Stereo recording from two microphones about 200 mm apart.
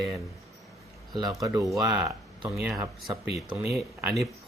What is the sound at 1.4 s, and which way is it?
Speech, 15° right (ahead or behind).